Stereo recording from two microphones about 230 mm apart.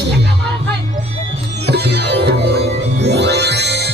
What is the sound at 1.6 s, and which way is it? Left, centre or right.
Music, right.